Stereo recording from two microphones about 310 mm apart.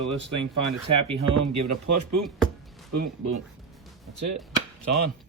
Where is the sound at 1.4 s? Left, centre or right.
Right.